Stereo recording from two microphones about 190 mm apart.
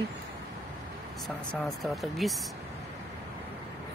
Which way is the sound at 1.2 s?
Centre (ahead or behind).